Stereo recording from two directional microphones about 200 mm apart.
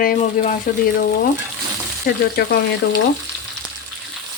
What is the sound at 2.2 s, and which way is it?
Speech, 50° left (ahead or behind).